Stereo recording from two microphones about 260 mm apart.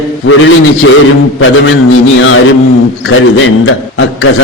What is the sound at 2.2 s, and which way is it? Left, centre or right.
Speech, left.